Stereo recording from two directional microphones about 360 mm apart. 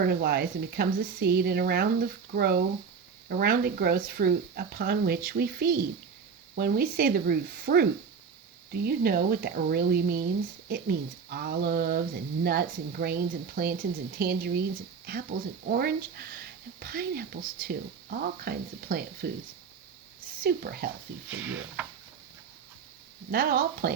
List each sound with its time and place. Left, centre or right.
0.0 s speech: right
20.4 s speech: right
21.2 s speech: centre
23.3 s speech: right